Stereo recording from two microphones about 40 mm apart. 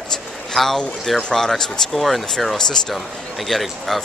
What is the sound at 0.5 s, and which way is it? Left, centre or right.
Speech, centre.